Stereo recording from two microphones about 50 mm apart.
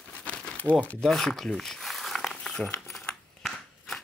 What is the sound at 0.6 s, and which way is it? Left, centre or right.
Speech, right.